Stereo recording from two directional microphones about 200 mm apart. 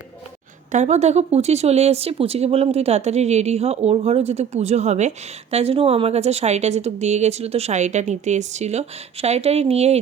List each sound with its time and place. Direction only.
0.7 s speech: 35° right (ahead or behind)